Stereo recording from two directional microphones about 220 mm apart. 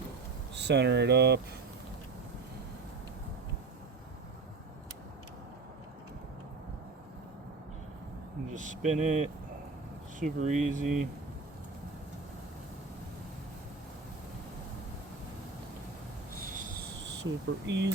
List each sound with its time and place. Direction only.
0.5 s speech: 50° right (ahead or behind)
8.4 s speech: 35° right (ahead or behind)
16.3 s a sound: 40° right (ahead or behind)
17.0 s speech: 55° right (ahead or behind)